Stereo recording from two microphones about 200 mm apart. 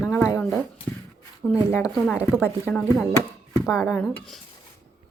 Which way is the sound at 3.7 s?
15° left (ahead or behind).